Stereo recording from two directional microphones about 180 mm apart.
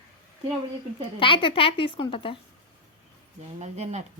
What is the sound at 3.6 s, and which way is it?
Speech, 40° right (ahead or behind).